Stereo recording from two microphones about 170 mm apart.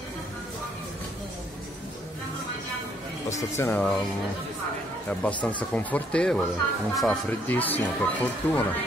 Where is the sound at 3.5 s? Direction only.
10° left (ahead or behind).